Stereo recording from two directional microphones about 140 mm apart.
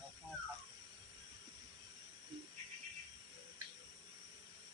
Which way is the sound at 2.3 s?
40° right (ahead or behind).